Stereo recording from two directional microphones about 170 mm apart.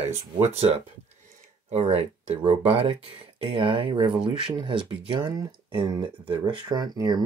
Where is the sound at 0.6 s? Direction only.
35° right (ahead or behind).